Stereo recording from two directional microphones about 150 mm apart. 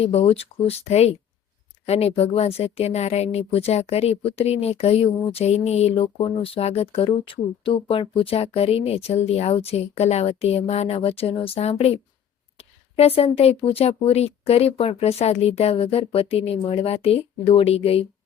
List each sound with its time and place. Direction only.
0.0 s speech: 45° left (ahead or behind)